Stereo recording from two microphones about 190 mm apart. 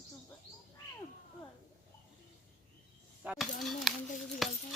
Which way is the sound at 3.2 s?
5° right (ahead or behind).